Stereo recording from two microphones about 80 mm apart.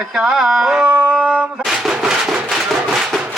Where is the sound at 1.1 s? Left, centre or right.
Centre.